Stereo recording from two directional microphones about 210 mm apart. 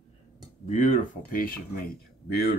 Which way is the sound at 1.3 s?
45° left (ahead or behind).